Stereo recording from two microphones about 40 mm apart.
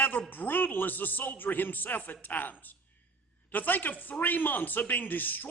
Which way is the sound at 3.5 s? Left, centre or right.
Left.